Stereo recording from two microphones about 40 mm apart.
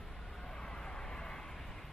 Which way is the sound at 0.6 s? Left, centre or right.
Centre.